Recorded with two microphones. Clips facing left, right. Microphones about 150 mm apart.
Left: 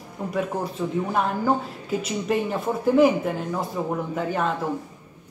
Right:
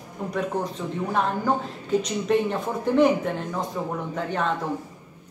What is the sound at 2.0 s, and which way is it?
Speech, 5° left (ahead or behind).